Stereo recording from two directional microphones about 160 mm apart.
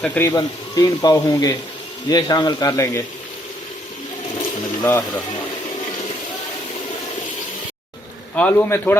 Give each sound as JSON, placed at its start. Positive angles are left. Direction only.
{"t": 0.0, "sound": "a man's voice", "side_deg": 10}
{"t": 0.3, "sound": "speech", "side_deg": 25}
{"t": 4.8, "sound": "a man's voice", "side_deg": 15}
{"t": 8.4, "sound": "a man's voice", "side_deg": 10}